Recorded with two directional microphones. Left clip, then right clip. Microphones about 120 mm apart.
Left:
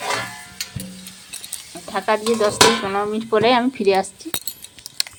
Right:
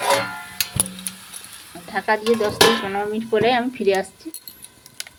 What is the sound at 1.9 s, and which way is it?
Dishes, 20° left (ahead or behind).